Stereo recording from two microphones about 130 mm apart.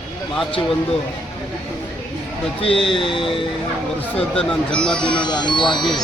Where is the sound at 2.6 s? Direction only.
40° left (ahead or behind).